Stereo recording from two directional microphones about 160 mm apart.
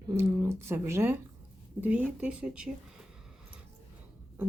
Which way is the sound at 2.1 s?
5° right (ahead or behind).